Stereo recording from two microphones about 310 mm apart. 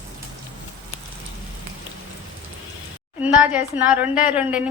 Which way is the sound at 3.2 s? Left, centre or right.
Centre.